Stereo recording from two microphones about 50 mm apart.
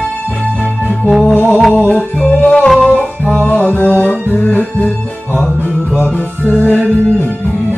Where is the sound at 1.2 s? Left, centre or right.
Left.